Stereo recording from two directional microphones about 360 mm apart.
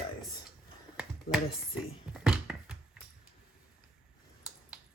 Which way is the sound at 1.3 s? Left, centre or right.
Left.